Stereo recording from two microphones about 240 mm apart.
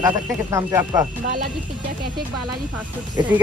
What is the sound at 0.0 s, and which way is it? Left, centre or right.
Speech, centre.